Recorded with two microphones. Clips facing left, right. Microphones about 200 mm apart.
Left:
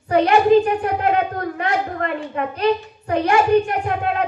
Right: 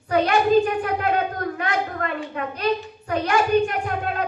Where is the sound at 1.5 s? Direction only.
30° left (ahead or behind).